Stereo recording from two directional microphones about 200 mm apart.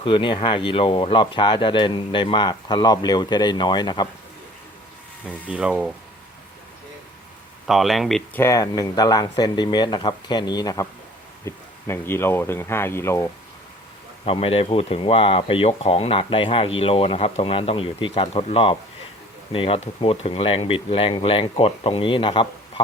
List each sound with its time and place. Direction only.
0.0 s speech: 25° left (ahead or behind)
5.5 s speech: 5° right (ahead or behind)
7.7 s speech: centre (ahead or behind)
8.4 s speech: 15° left (ahead or behind)
14.3 s speech: 30° left (ahead or behind)